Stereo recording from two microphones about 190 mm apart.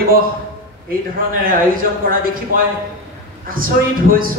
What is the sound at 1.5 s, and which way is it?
Speech, 50° right (ahead or behind).